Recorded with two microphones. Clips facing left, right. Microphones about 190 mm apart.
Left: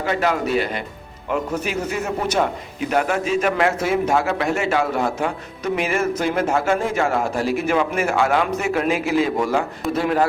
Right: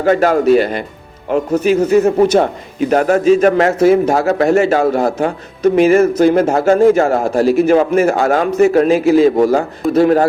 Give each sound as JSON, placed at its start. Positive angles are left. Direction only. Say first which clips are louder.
{"t": 0.0, "sound": "speech", "louder": "right 9 dB", "side_deg": -50}